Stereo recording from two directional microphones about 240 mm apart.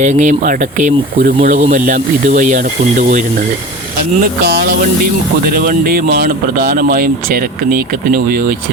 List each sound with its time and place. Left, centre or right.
0.0 s speech: right